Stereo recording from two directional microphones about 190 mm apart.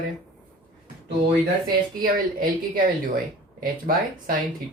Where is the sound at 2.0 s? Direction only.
45° right (ahead or behind).